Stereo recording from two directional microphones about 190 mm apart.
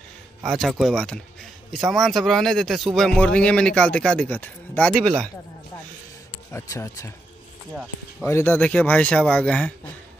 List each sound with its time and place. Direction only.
0.4 s a man's voice: centre (ahead or behind)
6.5 s speech: 15° left (ahead or behind)
8.3 s speech: 10° left (ahead or behind)